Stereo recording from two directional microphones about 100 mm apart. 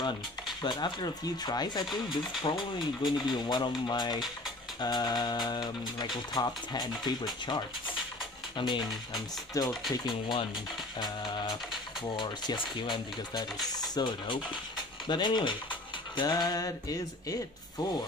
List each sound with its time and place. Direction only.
0.6 s speech: 50° left (ahead or behind)
8.5 s speech: 50° left (ahead or behind)
9.5 s speech: 35° left (ahead or behind)
9.9 s speech: 50° left (ahead or behind)